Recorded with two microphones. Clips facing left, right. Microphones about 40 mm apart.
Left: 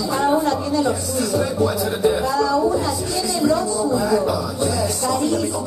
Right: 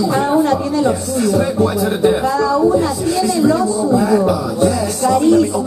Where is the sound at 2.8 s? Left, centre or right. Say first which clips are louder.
Right 6 dB; right.